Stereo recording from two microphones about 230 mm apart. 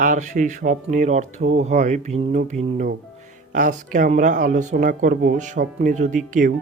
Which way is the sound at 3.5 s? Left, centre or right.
Right.